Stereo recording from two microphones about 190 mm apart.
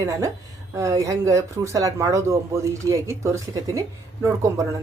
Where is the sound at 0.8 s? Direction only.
15° right (ahead or behind).